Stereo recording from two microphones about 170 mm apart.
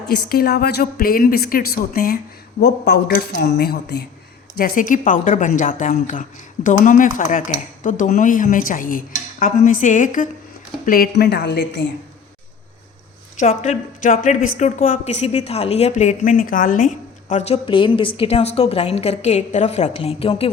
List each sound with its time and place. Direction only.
0.1 s a woman's voice: 65° left (ahead or behind)
4.5 s a woman's voice: 55° left (ahead or behind); by 11.9 s 90° left
13.4 s a woman's voice: 45° left (ahead or behind)